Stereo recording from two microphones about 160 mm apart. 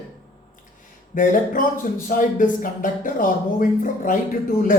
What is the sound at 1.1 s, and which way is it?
Speech, 55° left (ahead or behind).